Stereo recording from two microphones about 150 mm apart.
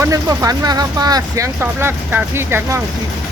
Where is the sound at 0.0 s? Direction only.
20° right (ahead or behind).